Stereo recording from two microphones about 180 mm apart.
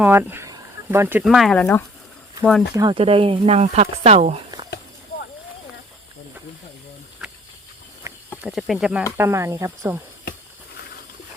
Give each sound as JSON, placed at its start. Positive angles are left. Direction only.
{"t": 0.0, "sound": "speech", "side_deg": -10}
{"t": 1.2, "sound": "speech", "side_deg": 0}
{"t": 2.9, "sound": "speech", "side_deg": -30}
{"t": 7.2, "sound": "a sound", "side_deg": 0}
{"t": 8.0, "sound": "cricket", "side_deg": -20}
{"t": 8.4, "sound": "speech", "side_deg": 0}
{"t": 9.1, "sound": "speech", "side_deg": -15}